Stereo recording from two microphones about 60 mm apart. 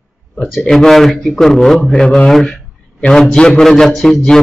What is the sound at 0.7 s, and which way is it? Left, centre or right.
A man's voice, centre.